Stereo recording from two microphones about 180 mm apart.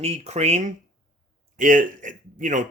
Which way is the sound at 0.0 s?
35° right (ahead or behind).